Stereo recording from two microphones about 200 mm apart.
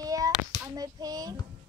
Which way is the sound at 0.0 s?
15° right (ahead or behind).